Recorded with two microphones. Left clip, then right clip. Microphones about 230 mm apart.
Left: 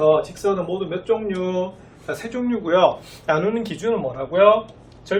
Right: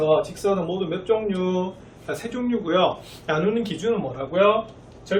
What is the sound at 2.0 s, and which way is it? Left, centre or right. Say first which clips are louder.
Speech: left 2 dB; centre.